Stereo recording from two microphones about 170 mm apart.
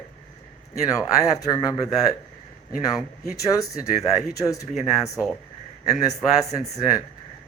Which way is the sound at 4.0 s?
20° left (ahead or behind).